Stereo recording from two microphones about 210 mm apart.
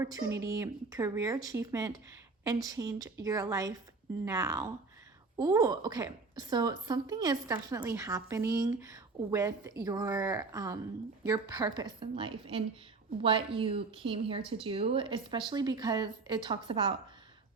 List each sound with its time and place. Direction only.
0.0 s a woman's voice: 15° right (ahead or behind)